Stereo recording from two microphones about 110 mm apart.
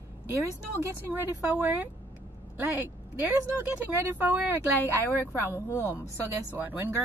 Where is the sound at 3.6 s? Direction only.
15° right (ahead or behind).